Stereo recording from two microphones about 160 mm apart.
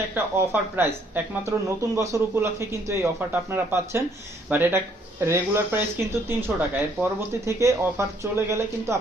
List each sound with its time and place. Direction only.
0.1 s speech: 10° right (ahead or behind)